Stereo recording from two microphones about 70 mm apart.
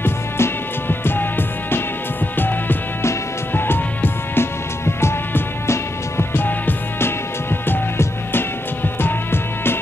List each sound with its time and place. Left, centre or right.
0.0 s music: left